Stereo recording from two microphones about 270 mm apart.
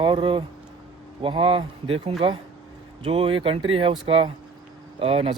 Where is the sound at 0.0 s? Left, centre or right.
Centre.